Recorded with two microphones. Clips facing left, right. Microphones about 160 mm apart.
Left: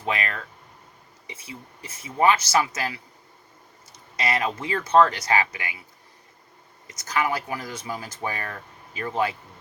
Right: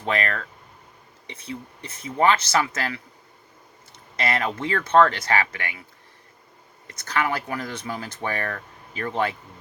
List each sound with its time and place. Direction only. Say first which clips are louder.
0.0 s speech: right 3 dB; 10° left (ahead or behind)
4.3 s speech: right 1 dB; 10° left (ahead or behind)
6.8 s speech: right 2 dB; 60° right (ahead or behind)
7.1 s speech: even; 10° left (ahead or behind)